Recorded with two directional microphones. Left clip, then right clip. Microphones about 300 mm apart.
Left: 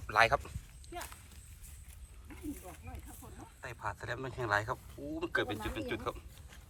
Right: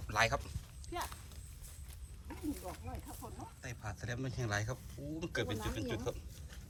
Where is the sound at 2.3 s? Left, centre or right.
Right.